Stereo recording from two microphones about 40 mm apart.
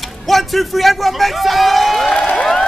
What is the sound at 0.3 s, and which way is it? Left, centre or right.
A man's voice, centre.